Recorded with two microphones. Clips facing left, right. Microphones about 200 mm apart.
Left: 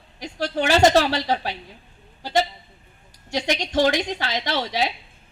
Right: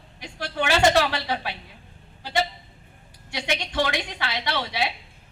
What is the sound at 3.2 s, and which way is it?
A man's voice, 40° left (ahead or behind).